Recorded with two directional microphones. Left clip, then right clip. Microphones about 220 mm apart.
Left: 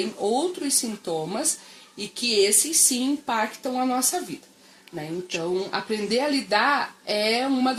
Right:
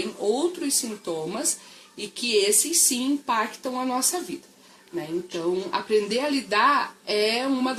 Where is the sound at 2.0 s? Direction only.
20° left (ahead or behind).